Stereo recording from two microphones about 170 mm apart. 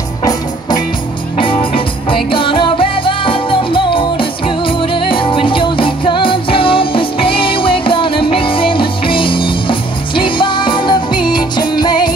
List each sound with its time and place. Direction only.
0.2 s music: 20° left (ahead or behind)